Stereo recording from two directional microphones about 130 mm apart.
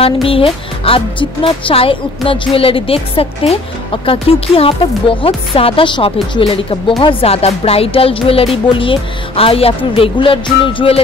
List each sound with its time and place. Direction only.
0.0 s speech: 45° left (ahead or behind)